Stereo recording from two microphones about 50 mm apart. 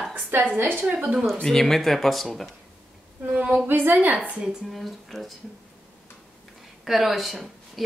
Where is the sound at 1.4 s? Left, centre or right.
Centre.